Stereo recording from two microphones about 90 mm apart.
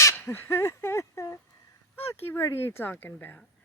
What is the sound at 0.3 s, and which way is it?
Speech, 25° left (ahead or behind).